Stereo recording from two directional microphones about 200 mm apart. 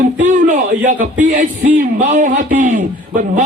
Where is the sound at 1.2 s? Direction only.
40° right (ahead or behind).